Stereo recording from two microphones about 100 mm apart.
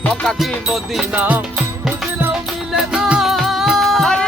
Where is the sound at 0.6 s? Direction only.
Centre (ahead or behind).